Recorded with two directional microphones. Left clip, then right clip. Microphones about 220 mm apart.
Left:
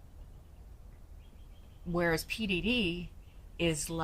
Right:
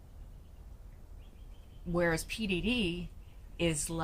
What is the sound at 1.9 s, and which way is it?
A woman's voice, 10° left (ahead or behind).